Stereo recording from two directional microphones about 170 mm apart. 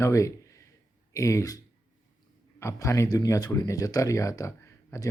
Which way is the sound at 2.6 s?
15° left (ahead or behind).